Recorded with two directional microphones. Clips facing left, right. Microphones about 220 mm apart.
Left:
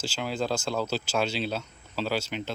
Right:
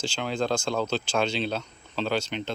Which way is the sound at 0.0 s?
5° left (ahead or behind).